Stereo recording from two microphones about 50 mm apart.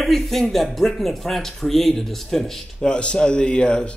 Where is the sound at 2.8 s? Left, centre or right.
Centre.